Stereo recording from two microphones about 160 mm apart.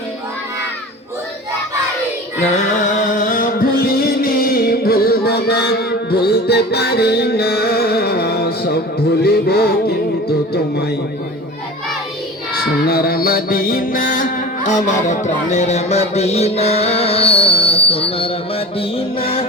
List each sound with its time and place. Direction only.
3.0 s music: 50° left (ahead or behind); by 10.8 s 90° left
12.5 s music: 70° left (ahead or behind); by 19.5 s 35° left (ahead or behind)